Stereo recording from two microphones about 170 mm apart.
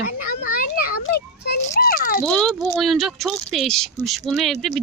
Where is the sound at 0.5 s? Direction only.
60° left (ahead or behind).